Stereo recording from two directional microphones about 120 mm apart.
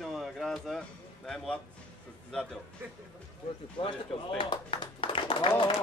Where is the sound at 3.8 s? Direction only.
45° left (ahead or behind).